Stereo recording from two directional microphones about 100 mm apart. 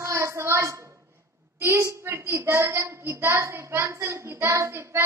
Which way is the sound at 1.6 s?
25° right (ahead or behind).